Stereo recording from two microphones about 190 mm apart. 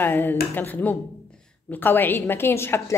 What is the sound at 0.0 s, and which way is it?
A woman's voice, 10° left (ahead or behind).